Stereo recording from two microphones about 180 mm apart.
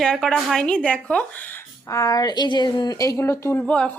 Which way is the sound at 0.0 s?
5° left (ahead or behind).